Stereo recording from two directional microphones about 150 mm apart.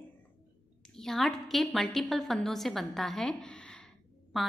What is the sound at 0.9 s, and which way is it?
A woman's voice, centre (ahead or behind).